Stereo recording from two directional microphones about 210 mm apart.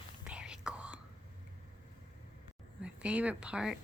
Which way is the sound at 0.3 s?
5° right (ahead or behind).